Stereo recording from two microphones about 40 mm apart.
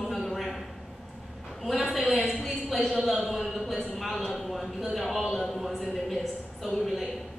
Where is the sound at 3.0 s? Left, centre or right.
Centre.